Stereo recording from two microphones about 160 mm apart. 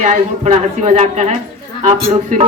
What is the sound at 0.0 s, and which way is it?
A woman's voice, 50° right (ahead or behind).